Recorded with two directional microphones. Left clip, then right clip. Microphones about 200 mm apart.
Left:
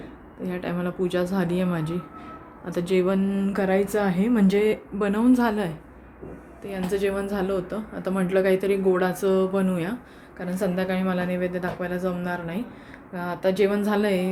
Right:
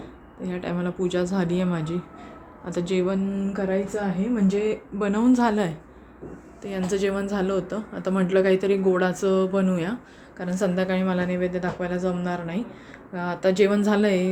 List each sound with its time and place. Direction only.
0.4 s a woman's voice: centre (ahead or behind)
3.3 s a woman's voice: 15° left (ahead or behind); by 14.3 s 15° right (ahead or behind)